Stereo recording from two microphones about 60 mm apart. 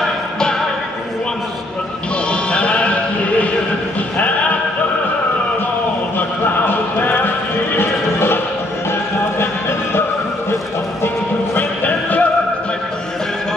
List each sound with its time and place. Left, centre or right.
0.0 s music: centre
2.5 s music: centre
4.2 s a sound: left
6.1 s clip-clop: left
11.5 s music: left